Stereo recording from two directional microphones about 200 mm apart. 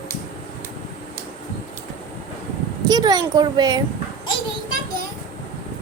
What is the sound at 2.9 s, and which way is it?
Speech, 20° right (ahead or behind).